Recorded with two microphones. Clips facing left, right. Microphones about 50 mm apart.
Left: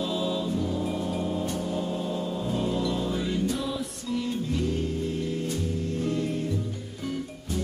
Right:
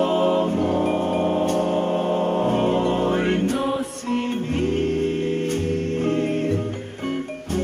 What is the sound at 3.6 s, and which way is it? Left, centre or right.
Music, right.